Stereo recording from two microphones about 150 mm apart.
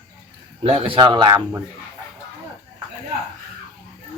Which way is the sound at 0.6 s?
40° right (ahead or behind).